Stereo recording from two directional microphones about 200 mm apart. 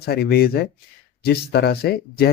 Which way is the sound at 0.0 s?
50° left (ahead or behind).